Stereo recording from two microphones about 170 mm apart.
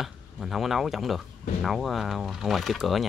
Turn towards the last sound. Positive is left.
turn(degrees=0)  # may be behind; listen again after turning